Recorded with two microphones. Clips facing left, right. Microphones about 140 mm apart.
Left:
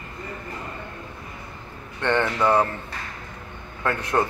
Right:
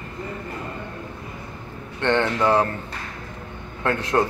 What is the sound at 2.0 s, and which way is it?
Speech, 20° right (ahead or behind).